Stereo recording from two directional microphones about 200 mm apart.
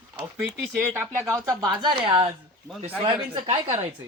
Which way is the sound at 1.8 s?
25° right (ahead or behind).